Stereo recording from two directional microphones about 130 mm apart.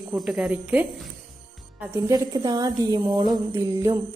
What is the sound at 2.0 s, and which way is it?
A woman's voice, 30° right (ahead or behind).